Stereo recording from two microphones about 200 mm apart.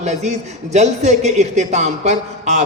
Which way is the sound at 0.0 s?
35° right (ahead or behind).